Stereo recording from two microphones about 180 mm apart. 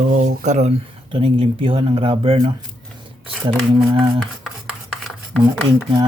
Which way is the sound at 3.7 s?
30° right (ahead or behind).